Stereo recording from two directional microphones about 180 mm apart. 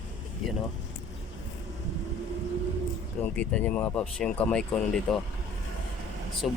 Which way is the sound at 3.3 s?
5° left (ahead or behind).